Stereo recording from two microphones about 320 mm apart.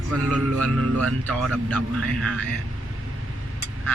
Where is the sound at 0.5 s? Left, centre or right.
Right.